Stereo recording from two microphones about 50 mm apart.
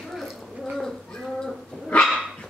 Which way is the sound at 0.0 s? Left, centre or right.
Centre.